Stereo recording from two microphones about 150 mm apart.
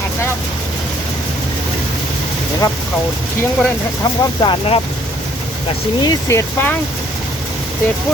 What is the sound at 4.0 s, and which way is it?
Speech, 30° left (ahead or behind).